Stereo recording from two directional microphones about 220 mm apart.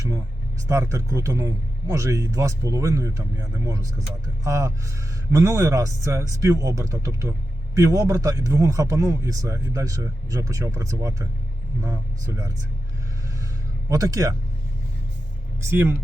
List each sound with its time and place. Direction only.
0.7 s speech: 15° right (ahead or behind)
13.9 s speech: 15° right (ahead or behind)
15.6 s speech: 10° right (ahead or behind)